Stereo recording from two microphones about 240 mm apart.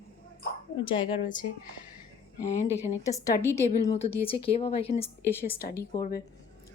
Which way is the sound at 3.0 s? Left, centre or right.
Centre.